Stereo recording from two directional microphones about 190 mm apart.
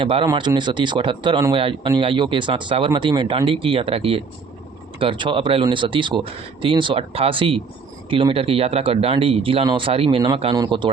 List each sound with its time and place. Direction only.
0.0 s speech: 30° right (ahead or behind)